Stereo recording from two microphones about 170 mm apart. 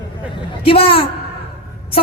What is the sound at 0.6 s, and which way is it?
Speech, 35° left (ahead or behind).